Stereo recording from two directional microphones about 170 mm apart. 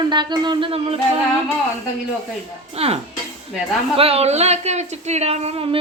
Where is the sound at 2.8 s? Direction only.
35° right (ahead or behind).